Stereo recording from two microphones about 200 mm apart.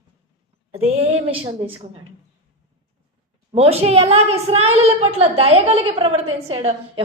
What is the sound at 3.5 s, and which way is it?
A woman's voice, 30° right (ahead or behind).